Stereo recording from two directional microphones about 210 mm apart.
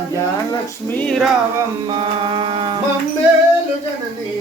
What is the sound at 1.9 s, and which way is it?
Mantra, 25° right (ahead or behind).